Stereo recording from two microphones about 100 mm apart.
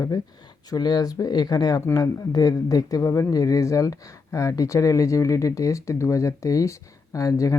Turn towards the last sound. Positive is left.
turn(degrees=35)  # may be behind; listen again after turning